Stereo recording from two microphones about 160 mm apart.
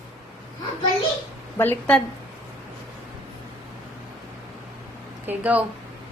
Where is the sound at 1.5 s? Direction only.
10° left (ahead or behind).